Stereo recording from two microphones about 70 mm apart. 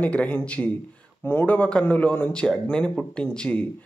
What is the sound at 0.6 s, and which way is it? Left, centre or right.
Speech, centre.